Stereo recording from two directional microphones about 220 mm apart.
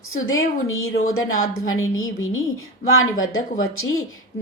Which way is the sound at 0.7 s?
70° left (ahead or behind).